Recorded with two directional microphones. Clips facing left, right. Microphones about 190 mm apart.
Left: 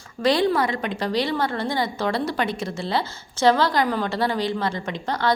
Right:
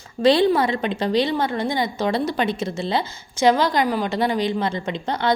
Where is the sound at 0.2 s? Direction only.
25° right (ahead or behind).